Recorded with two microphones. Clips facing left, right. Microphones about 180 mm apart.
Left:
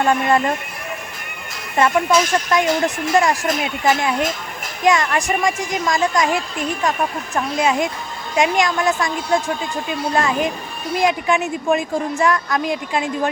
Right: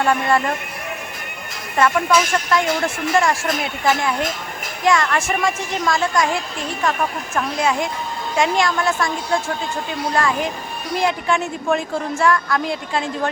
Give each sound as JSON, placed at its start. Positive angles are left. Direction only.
{"t": 0.0, "sound": "a woman's voice", "side_deg": 20}
{"t": 1.8, "sound": "a woman's voice", "side_deg": 20}
{"t": 4.9, "sound": "a woman's voice", "side_deg": 20}